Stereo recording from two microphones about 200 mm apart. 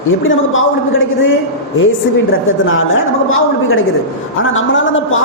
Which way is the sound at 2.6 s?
80° left.